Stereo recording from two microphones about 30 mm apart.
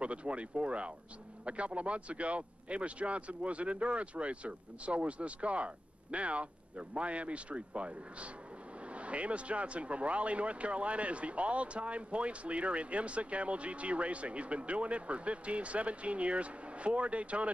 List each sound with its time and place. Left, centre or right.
0.0 s speech: right